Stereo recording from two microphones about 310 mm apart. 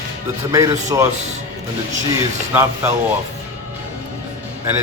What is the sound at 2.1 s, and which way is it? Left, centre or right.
Speech, centre.